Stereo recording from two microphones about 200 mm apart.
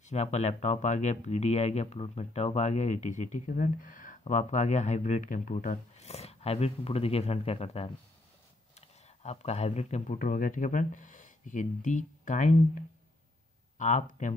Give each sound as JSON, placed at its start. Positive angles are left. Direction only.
{"t": 0.0, "sound": "speech", "side_deg": 35}
{"t": 13.7, "sound": "speech", "side_deg": 35}